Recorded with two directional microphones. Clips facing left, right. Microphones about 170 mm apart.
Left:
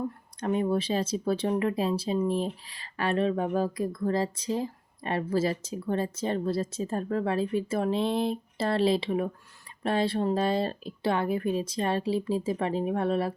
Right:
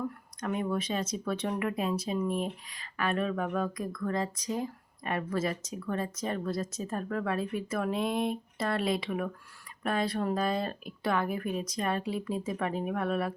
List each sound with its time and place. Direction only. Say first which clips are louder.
0.3 s speech: left 5 dB; 30° left (ahead or behind)